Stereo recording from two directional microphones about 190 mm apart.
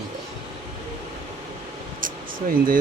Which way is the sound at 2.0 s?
45° right (ahead or behind).